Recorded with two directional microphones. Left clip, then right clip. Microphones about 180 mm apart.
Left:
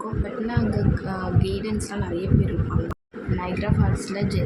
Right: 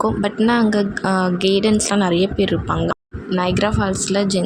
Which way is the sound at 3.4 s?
50° right (ahead or behind).